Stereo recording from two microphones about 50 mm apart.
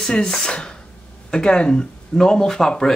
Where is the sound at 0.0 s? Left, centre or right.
Centre.